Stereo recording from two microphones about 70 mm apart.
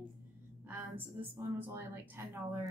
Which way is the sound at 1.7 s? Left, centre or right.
Right.